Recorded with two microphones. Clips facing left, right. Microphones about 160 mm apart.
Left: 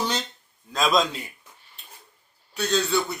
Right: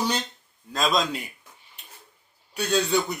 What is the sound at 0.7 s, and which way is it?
Speech, centre (ahead or behind).